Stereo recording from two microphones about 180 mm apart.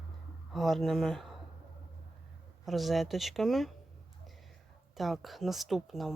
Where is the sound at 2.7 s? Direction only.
Centre (ahead or behind).